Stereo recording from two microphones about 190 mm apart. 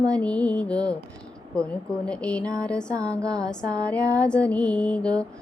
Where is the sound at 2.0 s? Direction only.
5° left (ahead or behind).